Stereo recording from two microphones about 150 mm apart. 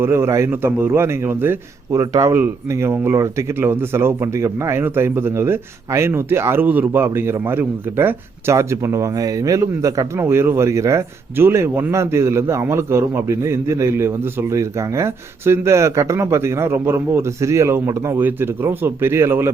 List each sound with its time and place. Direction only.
0.0 s a man's voice: 15° right (ahead or behind)